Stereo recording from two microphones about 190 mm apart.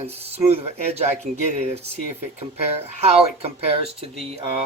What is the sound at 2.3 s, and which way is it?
Speech, 35° right (ahead or behind).